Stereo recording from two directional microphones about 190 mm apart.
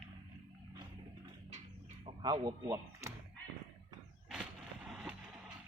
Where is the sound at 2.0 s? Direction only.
25° right (ahead or behind).